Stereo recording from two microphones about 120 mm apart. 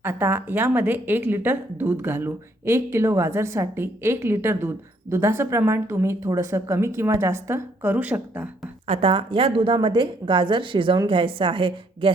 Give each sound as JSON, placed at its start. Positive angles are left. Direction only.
{"t": 0.0, "sound": "speech", "side_deg": -20}
{"t": 8.9, "sound": "a woman's voice", "side_deg": -50}